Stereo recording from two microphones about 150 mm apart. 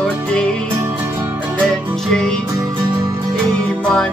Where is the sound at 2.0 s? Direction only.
5° left (ahead or behind).